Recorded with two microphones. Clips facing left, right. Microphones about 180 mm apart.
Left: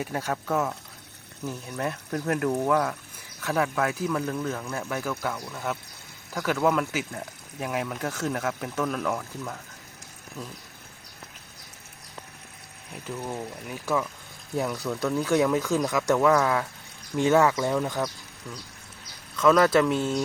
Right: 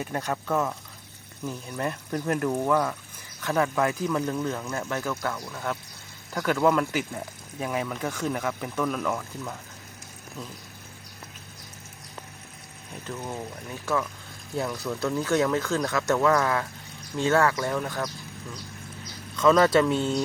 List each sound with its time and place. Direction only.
0.0 s speech: 5° left (ahead or behind)
12.9 s speech: 10° left (ahead or behind)
19.4 s speech: 5° left (ahead or behind)